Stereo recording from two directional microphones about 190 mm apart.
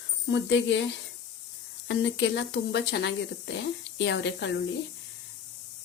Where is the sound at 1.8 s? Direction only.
70° left (ahead or behind).